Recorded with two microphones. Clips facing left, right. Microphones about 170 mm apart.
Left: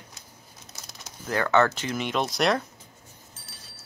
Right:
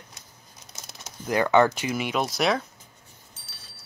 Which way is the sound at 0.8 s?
20° right (ahead or behind).